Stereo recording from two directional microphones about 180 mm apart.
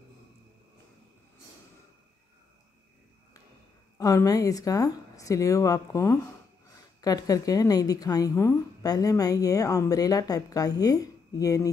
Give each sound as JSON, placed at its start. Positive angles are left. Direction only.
{"t": 4.0, "sound": "a woman's voice", "side_deg": 20}